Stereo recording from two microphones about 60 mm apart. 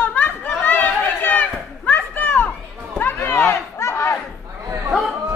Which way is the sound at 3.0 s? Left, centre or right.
Left.